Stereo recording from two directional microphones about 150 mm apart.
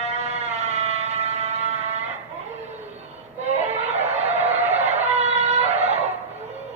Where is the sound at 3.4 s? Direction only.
45° right (ahead or behind).